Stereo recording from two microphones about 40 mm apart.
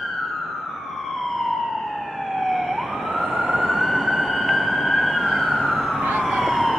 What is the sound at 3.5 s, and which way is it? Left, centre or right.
Emergency vehicle, right.